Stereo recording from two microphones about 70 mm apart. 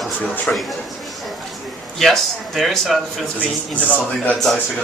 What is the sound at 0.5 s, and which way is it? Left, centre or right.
Speech, centre.